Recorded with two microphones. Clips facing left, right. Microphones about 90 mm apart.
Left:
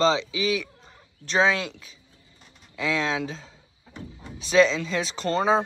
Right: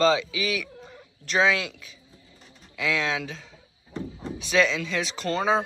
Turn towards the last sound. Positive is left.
turn(degrees=35)  # may be behind; listen again after turning